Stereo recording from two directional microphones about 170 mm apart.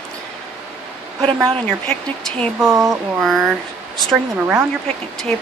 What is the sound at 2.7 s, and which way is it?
Speech, 20° right (ahead or behind).